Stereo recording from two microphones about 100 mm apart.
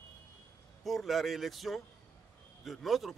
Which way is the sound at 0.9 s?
Centre (ahead or behind).